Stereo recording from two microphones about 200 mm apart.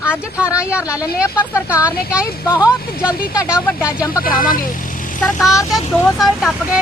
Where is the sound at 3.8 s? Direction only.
5° right (ahead or behind).